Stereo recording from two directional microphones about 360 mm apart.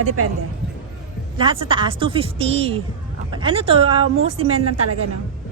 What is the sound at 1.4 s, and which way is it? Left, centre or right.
A woman's voice, centre.